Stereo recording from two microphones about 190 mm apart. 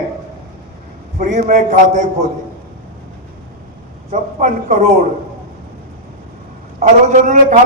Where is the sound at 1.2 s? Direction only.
45° right (ahead or behind).